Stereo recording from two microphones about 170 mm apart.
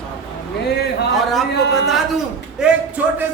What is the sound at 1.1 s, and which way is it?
Speech, centre (ahead or behind).